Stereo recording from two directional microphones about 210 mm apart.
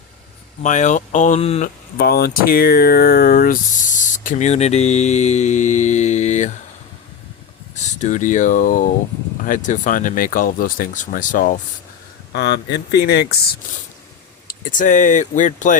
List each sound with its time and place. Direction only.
0.6 s speech: 35° left (ahead or behind)
2.0 s speech: 45° left (ahead or behind)
7.8 s speech: 35° left (ahead or behind)
12.3 s speech: 55° left (ahead or behind)
14.4 s speech: 40° left (ahead or behind)